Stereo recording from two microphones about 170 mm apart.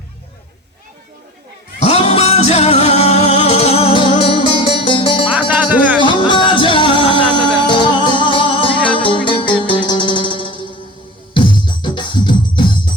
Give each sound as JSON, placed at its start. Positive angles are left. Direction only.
{"t": 1.8, "sound": "music", "side_deg": 35}
{"t": 5.3, "sound": "music", "side_deg": -10}
{"t": 6.0, "sound": "music", "side_deg": 30}